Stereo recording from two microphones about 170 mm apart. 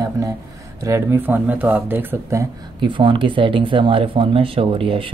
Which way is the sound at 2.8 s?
30° right (ahead or behind).